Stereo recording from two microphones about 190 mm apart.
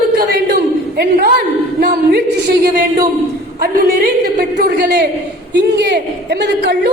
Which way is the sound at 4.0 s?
50° right (ahead or behind).